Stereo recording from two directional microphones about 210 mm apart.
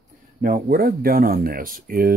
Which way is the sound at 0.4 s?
45° right (ahead or behind).